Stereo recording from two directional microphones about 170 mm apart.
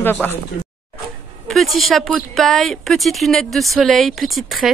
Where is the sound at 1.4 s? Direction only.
Centre (ahead or behind).